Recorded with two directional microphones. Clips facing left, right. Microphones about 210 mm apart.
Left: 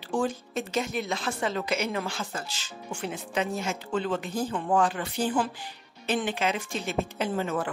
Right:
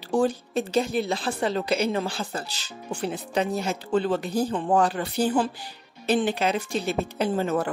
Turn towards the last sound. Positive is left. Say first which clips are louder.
# right 4 dB
turn(degrees=-40)  # may be behind; listen again after turning